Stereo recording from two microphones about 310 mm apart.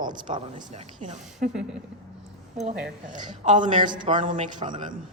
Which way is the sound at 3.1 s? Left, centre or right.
Right.